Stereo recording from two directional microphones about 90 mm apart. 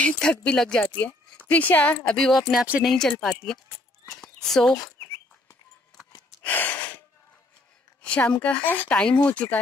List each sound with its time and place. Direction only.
0.0 s speech: 10° left (ahead or behind)
2.1 s speech: 5° left (ahead or behind)
6.4 s gasp: 20° left (ahead or behind)
8.0 s speech: 15° left (ahead or behind)